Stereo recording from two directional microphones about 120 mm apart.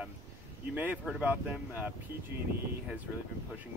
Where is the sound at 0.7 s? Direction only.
10° right (ahead or behind).